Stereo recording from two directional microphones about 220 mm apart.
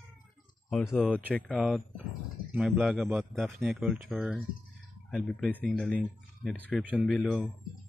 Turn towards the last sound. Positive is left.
turn(degrees=0)  # may be behind; listen again after turning